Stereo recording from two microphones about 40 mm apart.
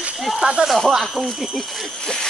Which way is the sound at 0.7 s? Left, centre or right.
Centre.